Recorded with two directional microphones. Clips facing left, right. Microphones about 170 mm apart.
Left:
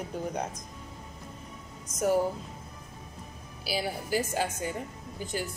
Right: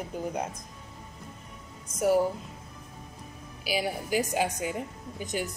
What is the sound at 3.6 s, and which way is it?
A woman's voice, 15° right (ahead or behind).